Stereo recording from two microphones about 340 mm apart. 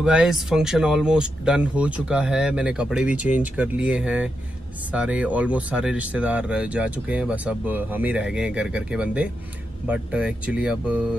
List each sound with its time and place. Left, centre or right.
0.0 s speech: centre